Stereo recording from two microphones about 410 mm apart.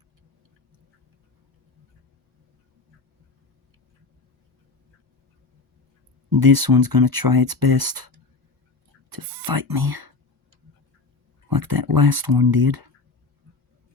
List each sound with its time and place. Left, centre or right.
6.3 s speech: right
9.6 s speech: right
11.4 s speech: right